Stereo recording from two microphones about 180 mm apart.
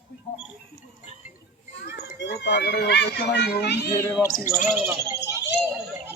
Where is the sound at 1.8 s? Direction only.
75° left (ahead or behind).